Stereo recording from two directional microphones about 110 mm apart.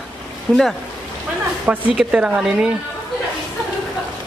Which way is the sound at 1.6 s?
10° right (ahead or behind).